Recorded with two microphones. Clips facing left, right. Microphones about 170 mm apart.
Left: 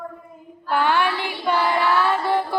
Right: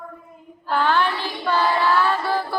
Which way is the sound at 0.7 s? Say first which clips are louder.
Even; 15° left (ahead or behind).